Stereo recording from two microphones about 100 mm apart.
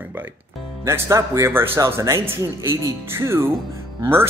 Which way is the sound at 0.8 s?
30° right (ahead or behind).